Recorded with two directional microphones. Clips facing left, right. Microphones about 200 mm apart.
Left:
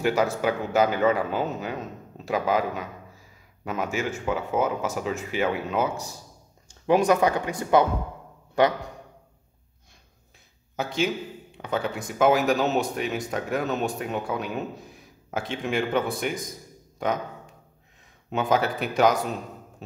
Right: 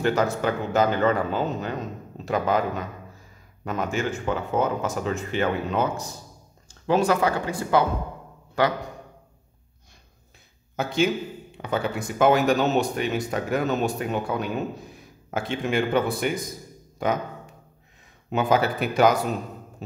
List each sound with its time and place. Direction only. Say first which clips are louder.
0.0 s a man's voice: even; 10° left (ahead or behind)
10.8 s a man's voice: right 3 dB; centre (ahead or behind)
18.3 s a man's voice: right 2 dB; centre (ahead or behind)